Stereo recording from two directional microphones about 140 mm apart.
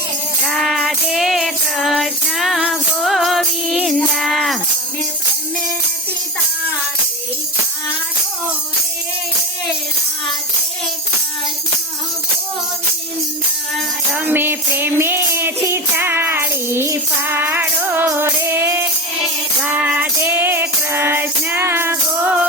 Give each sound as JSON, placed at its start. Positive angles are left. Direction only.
{"t": 0.4, "sound": "music", "side_deg": 0}
{"t": 14.1, "sound": "music", "side_deg": -10}